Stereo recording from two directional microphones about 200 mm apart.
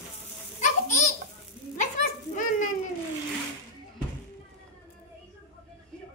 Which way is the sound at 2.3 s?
40° left (ahead or behind).